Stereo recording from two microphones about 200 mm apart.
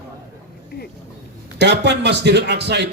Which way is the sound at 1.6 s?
60° right (ahead or behind).